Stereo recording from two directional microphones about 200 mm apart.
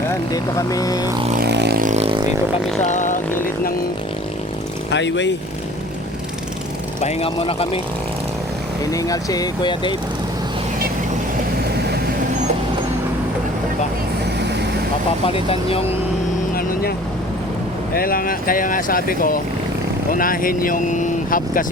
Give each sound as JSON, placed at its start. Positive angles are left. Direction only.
{"t": 0.1, "sound": "speech", "side_deg": 15}
{"t": 1.4, "sound": "vehicle", "side_deg": -55}
{"t": 2.8, "sound": "speech", "side_deg": 40}
{"t": 4.9, "sound": "speech", "side_deg": 60}
{"t": 7.0, "sound": "speech", "side_deg": 30}
{"t": 8.9, "sound": "speech", "side_deg": 15}
{"t": 15.3, "sound": "speech", "side_deg": 30}
{"t": 17.9, "sound": "speech", "side_deg": 45}